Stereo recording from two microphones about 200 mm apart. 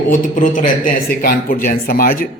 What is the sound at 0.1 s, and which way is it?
Speech, 40° left (ahead or behind).